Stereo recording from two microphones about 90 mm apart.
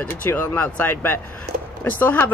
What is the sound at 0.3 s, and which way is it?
Speech, 20° left (ahead or behind).